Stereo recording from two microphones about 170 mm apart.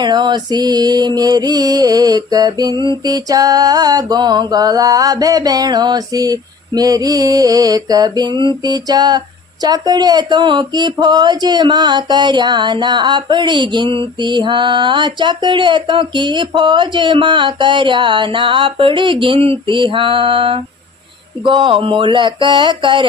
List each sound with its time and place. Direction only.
0.0 s speech: 25° right (ahead or behind)